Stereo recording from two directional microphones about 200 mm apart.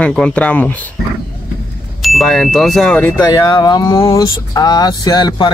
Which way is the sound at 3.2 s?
20° left (ahead or behind).